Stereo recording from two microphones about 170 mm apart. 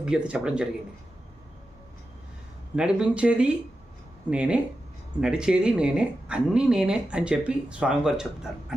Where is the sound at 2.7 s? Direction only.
5° right (ahead or behind).